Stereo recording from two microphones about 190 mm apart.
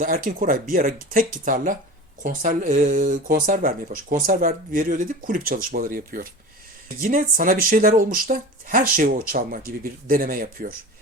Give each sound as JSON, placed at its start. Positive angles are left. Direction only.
{"t": 0.0, "sound": "speech", "side_deg": -50}